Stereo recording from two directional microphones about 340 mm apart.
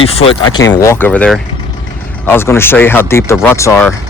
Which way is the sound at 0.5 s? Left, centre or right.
Centre.